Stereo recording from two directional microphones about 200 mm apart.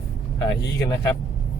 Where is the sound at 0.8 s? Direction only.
15° left (ahead or behind).